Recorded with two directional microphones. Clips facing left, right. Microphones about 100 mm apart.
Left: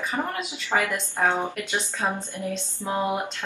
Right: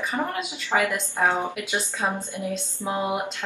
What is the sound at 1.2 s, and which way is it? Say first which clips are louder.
A woman's voice: even; 10° right (ahead or behind).